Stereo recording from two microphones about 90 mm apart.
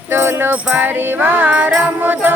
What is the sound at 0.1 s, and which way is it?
Music, 25° right (ahead or behind).